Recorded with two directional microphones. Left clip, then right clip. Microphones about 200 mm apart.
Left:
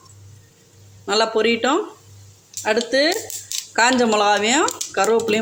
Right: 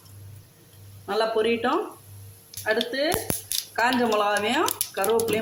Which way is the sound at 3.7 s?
40° left (ahead or behind).